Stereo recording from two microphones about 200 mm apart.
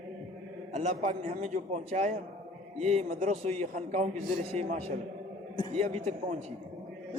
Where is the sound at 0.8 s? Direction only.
35° right (ahead or behind).